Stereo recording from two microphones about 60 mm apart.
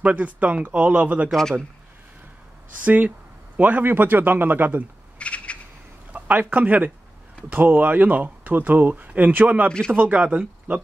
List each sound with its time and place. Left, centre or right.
0.0 s speech: right
2.8 s speech: right
5.2 s a sound: left
6.1 s a man's voice: right
9.7 s speech: centre
9.9 s speech: right